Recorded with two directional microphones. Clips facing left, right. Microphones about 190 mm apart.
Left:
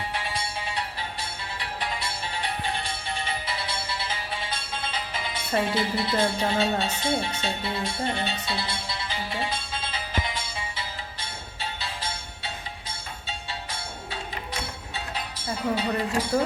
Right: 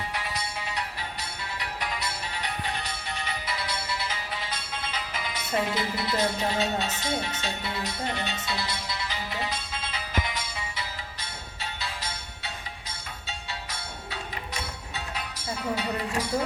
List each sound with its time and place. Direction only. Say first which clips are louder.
0.1 s music: left 2 dB; 30° left (ahead or behind)